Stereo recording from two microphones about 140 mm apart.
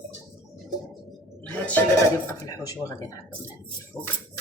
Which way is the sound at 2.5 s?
25° left (ahead or behind).